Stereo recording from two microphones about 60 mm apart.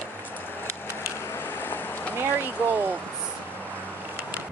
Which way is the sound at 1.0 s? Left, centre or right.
Left.